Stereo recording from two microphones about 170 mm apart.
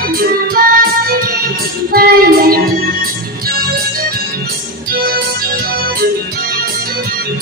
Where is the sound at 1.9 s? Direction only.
60° right (ahead or behind).